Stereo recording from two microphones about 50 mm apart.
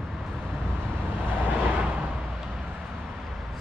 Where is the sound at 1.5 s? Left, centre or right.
Right.